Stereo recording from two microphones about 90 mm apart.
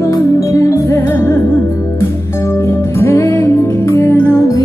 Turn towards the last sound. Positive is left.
turn(degrees=30)  # may be behind; listen again after turning